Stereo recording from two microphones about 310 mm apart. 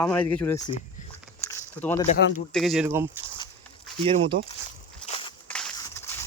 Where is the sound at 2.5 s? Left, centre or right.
Centre.